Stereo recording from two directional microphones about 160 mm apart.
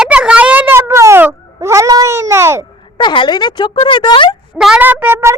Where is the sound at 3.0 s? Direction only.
30° left (ahead or behind).